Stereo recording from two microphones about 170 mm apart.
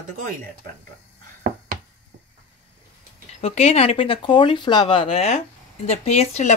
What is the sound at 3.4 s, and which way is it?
Speech, 35° left (ahead or behind).